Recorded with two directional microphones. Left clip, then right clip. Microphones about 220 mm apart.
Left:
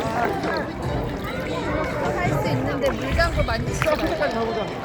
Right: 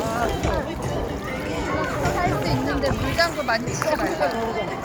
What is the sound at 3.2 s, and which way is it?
Boat, 25° left (ahead or behind).